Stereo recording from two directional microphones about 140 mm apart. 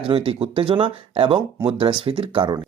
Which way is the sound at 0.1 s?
45° right (ahead or behind).